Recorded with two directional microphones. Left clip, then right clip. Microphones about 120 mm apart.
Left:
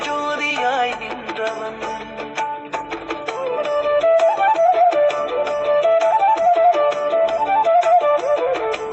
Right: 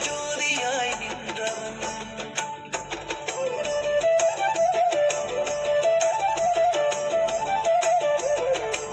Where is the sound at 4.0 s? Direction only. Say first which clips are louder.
Left 7 dB; 25° right (ahead or behind).